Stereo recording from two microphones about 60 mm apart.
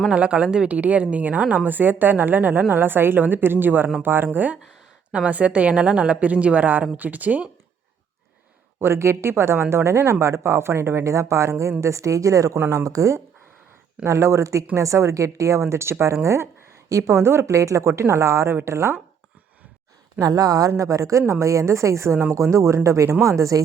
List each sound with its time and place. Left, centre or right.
0.1 s a woman's voice: centre
8.8 s speech: right
20.1 s speech: right